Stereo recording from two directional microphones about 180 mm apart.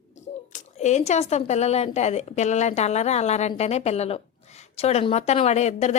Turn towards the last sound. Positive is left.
turn(degrees=40)  # may be behind; listen again after turning